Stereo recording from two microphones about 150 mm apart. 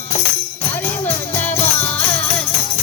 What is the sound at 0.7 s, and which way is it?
Music, 15° left (ahead or behind).